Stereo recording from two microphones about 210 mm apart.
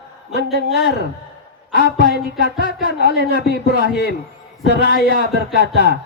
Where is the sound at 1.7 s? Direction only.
45° left (ahead or behind).